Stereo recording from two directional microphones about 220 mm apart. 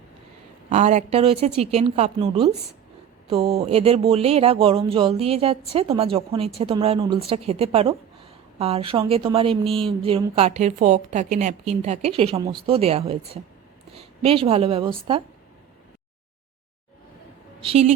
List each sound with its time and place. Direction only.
0.7 s a woman's voice: 30° right (ahead or behind)
17.6 s a woman's voice: 25° right (ahead or behind)